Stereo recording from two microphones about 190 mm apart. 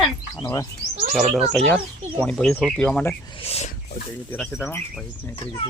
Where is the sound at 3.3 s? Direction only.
30° left (ahead or behind).